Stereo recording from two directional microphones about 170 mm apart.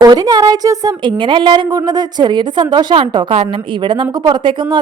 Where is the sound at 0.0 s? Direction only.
20° right (ahead or behind).